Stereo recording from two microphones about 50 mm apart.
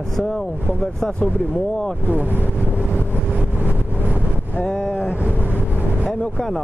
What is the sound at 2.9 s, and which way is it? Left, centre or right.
Vehicle, right.